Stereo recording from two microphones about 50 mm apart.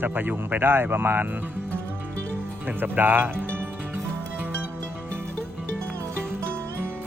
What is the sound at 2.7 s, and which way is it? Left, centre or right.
Speech, right.